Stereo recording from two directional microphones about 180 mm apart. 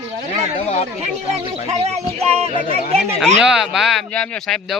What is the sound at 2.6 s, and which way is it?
Speech, 50° left (ahead or behind).